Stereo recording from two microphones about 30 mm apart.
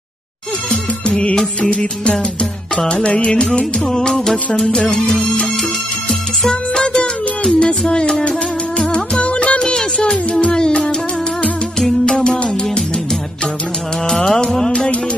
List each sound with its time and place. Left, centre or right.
1.6 s music: left; by 4.9 s centre
6.5 s music: left
9.2 s music: left
9.6 s music: left
12.1 s music: left
14.1 s music: centre